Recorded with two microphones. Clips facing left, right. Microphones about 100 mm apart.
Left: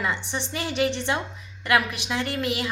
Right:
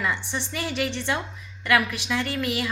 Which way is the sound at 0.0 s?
15° left (ahead or behind).